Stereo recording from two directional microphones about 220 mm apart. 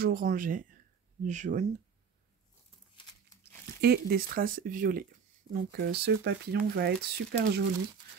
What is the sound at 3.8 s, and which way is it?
Speech, 45° right (ahead or behind).